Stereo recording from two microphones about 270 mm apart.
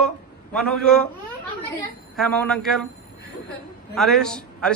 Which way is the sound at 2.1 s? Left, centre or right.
Centre.